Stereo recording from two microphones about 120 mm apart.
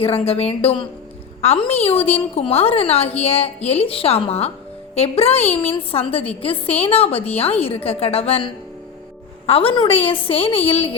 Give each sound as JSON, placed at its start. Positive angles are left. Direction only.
{"t": 0.0, "sound": "a woman's voice", "side_deg": 55}
{"t": 9.5, "sound": "a woman's voice", "side_deg": 50}